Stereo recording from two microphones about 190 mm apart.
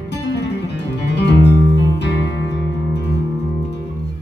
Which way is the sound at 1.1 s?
65° left (ahead or behind).